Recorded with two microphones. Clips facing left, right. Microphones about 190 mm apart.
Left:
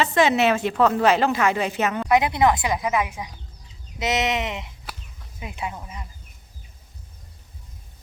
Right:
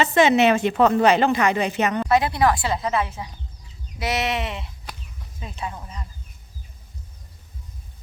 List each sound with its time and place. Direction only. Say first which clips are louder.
0.0 s a woman's voice: right 2 dB; centre (ahead or behind)
2.0 s speech: left 2 dB; 20° left (ahead or behind)